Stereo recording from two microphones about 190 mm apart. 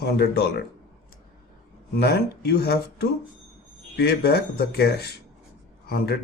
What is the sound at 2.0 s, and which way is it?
Speech, 55° left (ahead or behind).